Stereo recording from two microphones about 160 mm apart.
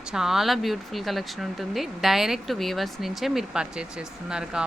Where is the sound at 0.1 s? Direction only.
5° right (ahead or behind).